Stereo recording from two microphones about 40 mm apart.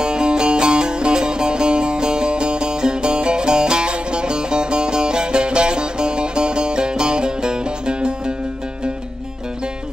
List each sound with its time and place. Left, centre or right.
0.0 s music: right